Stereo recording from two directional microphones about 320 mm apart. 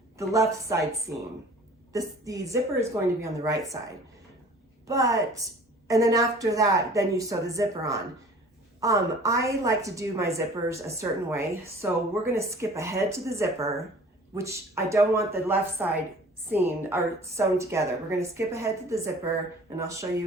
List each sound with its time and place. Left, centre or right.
0.2 s a woman's voice: centre
1.9 s a woman's voice: centre
4.9 s a woman's voice: centre